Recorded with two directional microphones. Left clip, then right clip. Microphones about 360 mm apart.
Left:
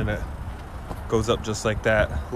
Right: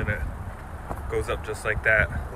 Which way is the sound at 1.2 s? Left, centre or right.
Centre.